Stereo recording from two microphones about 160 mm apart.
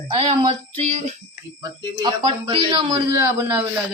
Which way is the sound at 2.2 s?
35° right (ahead or behind).